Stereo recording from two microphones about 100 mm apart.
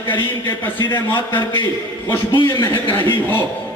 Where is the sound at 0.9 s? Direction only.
50° left (ahead or behind).